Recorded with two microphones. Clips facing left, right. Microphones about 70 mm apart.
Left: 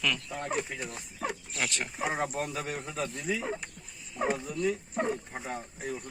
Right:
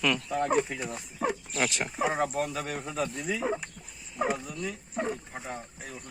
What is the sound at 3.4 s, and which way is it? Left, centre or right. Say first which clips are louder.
Speech: right 4 dB; centre.